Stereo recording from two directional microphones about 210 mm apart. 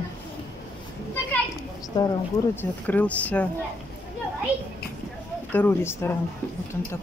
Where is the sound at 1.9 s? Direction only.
15° left (ahead or behind).